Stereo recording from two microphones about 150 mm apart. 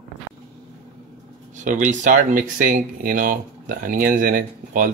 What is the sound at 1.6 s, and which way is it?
Speech, 55° right (ahead or behind).